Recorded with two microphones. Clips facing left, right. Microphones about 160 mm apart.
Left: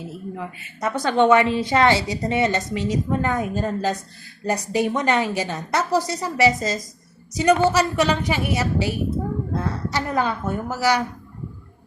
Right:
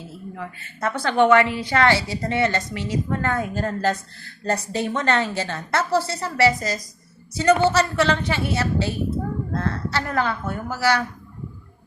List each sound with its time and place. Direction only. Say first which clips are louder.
0.1 s a woman's voice: left 3 dB; 15° left (ahead or behind)
7.3 s a woman's voice: even; 10° left (ahead or behind)